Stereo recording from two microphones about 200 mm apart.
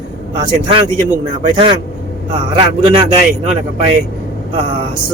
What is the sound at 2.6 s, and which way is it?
Speech, 25° right (ahead or behind).